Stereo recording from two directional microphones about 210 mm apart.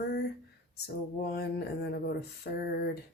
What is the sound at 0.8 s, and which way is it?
Speech, 50° left (ahead or behind).